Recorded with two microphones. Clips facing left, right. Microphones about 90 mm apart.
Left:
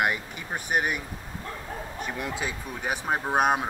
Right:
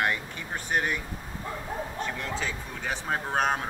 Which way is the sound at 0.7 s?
15° left (ahead or behind).